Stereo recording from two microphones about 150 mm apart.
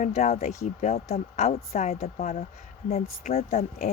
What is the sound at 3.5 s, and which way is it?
Speech, 70° left (ahead or behind).